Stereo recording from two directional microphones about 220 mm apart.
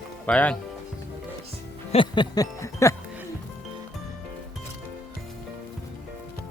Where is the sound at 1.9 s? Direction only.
20° left (ahead or behind).